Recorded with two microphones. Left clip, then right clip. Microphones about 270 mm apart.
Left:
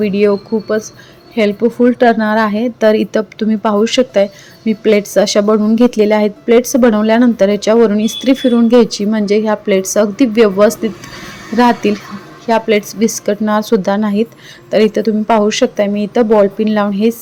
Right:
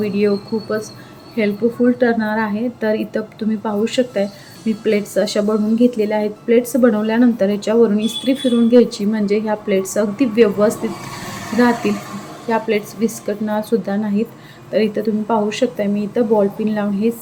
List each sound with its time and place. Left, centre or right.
0.0 s a woman's voice: left